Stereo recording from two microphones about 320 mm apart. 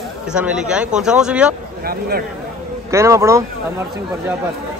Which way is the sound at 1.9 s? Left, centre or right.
Right.